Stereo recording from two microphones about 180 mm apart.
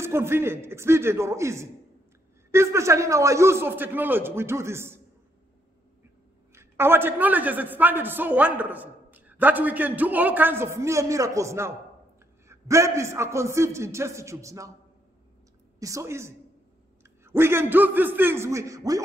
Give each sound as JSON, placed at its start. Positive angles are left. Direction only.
{"t": 0.0, "sound": "a man's voice", "side_deg": -15}
{"t": 6.5, "sound": "a man's voice", "side_deg": -15}
{"t": 15.8, "sound": "a man's voice", "side_deg": -15}